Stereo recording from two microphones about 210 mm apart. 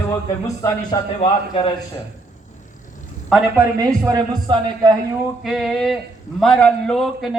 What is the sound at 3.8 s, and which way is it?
A man's voice, 15° right (ahead or behind).